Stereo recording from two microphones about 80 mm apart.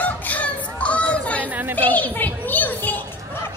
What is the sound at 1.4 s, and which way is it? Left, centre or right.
Speech, right.